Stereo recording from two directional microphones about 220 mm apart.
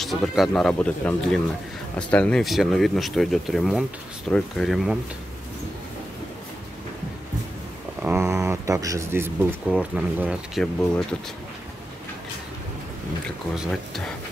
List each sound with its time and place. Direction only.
0.0 s speech: centre (ahead or behind)
8.0 s speech: 10° right (ahead or behind)
13.6 s speech: centre (ahead or behind)